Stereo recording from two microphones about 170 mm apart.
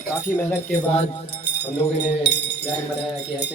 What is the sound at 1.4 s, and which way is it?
Speech, 90° left.